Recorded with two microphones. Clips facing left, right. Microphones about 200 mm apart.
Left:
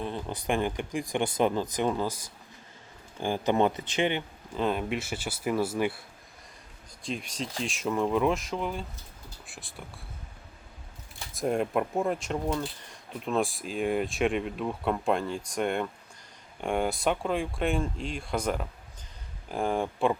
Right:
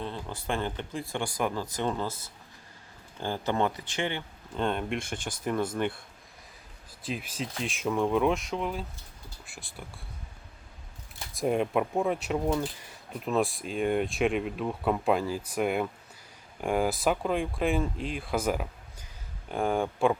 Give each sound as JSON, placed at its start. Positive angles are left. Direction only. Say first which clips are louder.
{"t": 0.0, "sound": "speech", "louder": "left 3 dB", "side_deg": 15}
{"t": 4.5, "sound": "speech", "louder": "left 1 dB", "side_deg": 5}
{"t": 11.3, "sound": "speech", "louder": "right 1 dB", "side_deg": 0}